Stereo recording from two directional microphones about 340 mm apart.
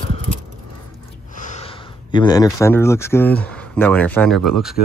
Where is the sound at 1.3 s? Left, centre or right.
Left.